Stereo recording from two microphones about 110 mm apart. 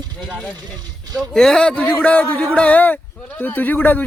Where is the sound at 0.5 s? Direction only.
40° right (ahead or behind).